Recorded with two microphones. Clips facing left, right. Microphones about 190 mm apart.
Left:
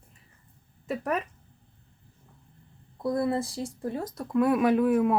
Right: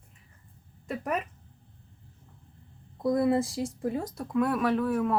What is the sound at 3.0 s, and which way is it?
Speech, 20° right (ahead or behind).